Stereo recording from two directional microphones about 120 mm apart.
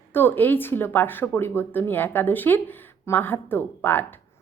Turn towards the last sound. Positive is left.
turn(degrees=15)  # may be behind; listen again after turning